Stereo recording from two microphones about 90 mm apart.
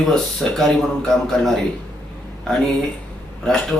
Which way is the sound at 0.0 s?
5° left (ahead or behind).